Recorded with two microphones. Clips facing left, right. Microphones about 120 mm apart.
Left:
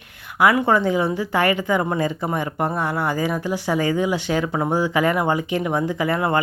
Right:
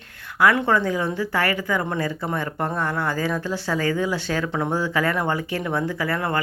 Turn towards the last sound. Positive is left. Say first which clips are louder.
# left 4 dB
turn(degrees=20)  # may be behind; listen again after turning